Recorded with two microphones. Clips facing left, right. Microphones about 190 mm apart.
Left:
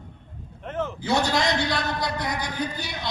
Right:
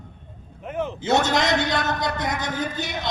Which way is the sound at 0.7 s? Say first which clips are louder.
Right 3 dB; 15° right (ahead or behind).